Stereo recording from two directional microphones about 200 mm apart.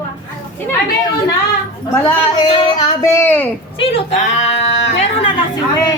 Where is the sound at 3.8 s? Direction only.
35° left (ahead or behind).